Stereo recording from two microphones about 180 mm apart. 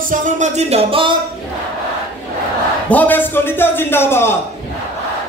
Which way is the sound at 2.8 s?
10° left (ahead or behind).